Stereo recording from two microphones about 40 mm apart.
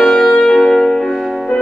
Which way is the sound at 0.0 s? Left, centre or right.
Centre.